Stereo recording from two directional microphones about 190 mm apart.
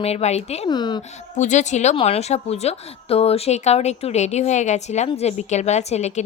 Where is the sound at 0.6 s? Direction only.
25° left (ahead or behind).